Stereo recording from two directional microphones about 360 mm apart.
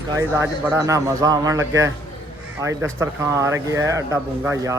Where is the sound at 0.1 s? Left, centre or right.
Centre.